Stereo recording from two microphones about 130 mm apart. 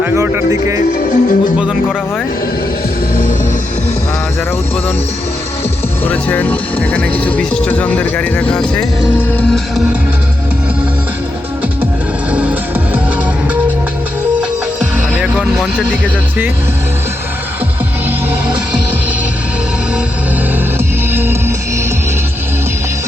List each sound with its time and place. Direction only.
0.0 s speech: 20° right (ahead or behind)
0.9 s speech: 90° left
6.1 s speech: 15° left (ahead or behind)
12.3 s music: 10° right (ahead or behind)
15.1 s vehicle: 10° right (ahead or behind)
20.7 s music: 15° right (ahead or behind)